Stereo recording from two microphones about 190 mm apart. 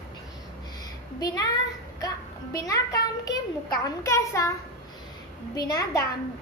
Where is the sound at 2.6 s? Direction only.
20° left (ahead or behind).